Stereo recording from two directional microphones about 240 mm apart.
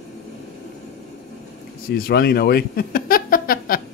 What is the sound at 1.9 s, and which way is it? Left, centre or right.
A man's voice, left.